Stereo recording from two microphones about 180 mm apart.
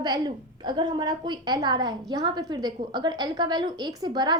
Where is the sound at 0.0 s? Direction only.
25° right (ahead or behind).